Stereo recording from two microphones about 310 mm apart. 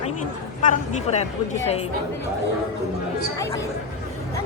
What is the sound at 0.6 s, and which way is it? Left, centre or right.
Speech, left.